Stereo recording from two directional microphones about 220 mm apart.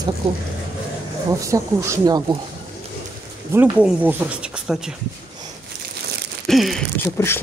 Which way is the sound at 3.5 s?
10° right (ahead or behind).